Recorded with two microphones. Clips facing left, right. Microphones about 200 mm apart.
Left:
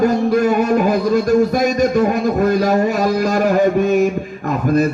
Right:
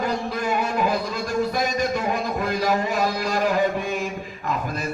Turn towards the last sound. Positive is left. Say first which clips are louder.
# left 12 dB
turn(degrees=45)  # may be behind; listen again after turning